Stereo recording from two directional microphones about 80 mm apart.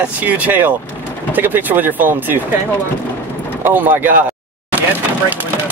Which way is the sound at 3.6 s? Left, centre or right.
Right.